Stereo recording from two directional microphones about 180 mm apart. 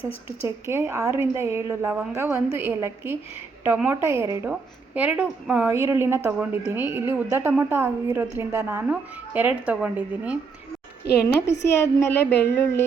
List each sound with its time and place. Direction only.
0.4 s a woman's voice: 15° right (ahead or behind)
11.2 s speech: 15° left (ahead or behind)